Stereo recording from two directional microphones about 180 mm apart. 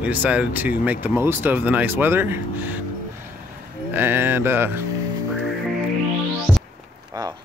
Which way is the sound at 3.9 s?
10° right (ahead or behind).